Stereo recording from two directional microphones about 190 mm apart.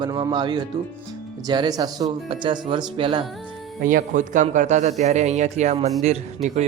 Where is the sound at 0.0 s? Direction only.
20° right (ahead or behind).